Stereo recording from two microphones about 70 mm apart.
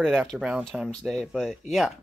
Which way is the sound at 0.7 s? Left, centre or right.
Centre.